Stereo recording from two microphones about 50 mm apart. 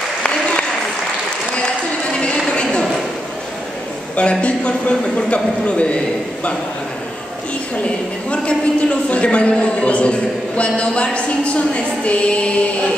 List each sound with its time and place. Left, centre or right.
0.2 s applause: left
2.5 s a sound: centre
4.2 s a man's voice: left
8.3 s a man's voice: left